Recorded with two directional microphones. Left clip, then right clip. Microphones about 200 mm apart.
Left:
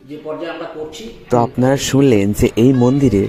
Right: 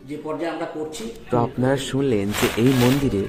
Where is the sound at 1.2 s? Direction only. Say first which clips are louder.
Left 7 dB; 30° left (ahead or behind).